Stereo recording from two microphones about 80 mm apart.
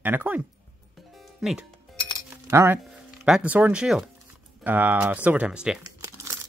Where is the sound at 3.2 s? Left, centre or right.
Centre.